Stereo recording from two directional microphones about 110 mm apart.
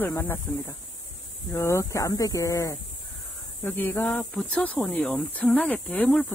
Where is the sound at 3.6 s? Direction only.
15° left (ahead or behind).